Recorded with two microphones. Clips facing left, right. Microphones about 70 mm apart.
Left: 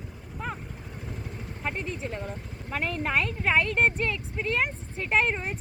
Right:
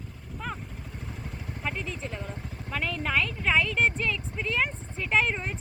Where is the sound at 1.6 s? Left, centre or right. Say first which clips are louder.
Left 2 dB; left.